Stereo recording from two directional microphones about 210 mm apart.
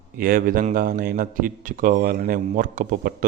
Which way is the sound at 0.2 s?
40° right (ahead or behind).